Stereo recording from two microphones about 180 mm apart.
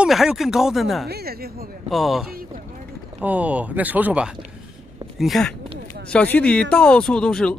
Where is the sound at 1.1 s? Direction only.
60° right (ahead or behind).